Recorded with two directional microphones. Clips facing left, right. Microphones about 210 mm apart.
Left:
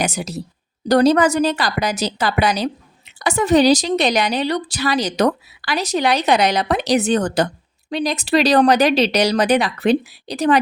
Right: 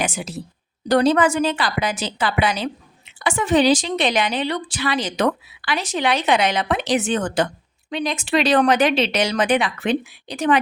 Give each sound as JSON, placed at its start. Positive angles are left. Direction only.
{"t": 0.0, "sound": "a woman's voice", "side_deg": 40}